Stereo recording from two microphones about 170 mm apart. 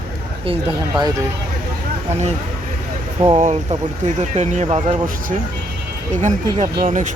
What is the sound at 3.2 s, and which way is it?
Speech, 40° right (ahead or behind).